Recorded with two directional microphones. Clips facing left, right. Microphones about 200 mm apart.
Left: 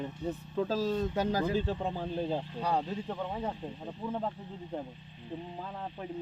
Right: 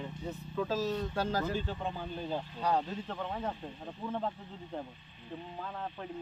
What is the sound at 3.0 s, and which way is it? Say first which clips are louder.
Speech: left 2 dB; 10° left (ahead or behind).